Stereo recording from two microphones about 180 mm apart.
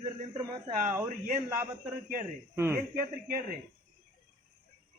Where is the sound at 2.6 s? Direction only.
15° right (ahead or behind).